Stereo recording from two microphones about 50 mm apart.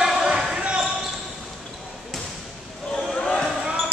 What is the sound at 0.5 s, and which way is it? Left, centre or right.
Basketball bounce, right.